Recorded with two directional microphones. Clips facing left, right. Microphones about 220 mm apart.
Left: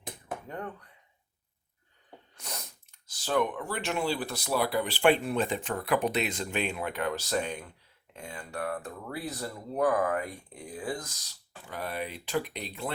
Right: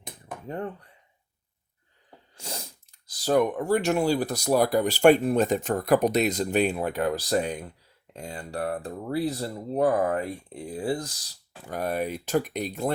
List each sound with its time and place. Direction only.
0.4 s speech: 30° right (ahead or behind)
2.3 s sneeze: 30° right (ahead or behind)
3.1 s speech: 40° right (ahead or behind)